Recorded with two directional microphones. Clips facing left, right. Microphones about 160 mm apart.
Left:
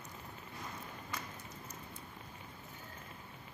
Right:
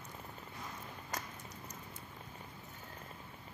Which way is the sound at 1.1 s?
40° right (ahead or behind).